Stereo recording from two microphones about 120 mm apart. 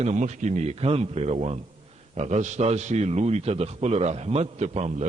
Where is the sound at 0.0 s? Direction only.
80° right.